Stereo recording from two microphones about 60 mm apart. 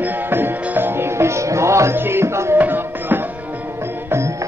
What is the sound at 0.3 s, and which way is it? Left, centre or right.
Music, right.